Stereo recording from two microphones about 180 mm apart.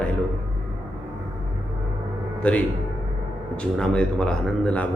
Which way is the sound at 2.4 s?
5° left (ahead or behind).